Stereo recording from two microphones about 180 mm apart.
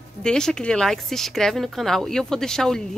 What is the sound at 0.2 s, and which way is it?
A woman's voice, 5° left (ahead or behind).